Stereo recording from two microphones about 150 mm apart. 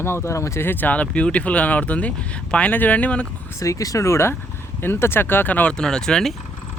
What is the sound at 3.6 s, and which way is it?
Speech, 20° left (ahead or behind).